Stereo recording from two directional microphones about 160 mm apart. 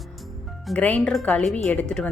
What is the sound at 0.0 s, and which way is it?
A woman's voice, centre (ahead or behind).